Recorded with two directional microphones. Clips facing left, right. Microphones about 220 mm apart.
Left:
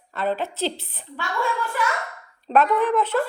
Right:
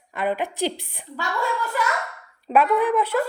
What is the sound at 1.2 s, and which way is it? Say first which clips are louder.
Speech: even; 40° right (ahead or behind).